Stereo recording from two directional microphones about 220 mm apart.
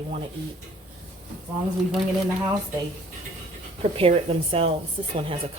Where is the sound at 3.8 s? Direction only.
25° right (ahead or behind).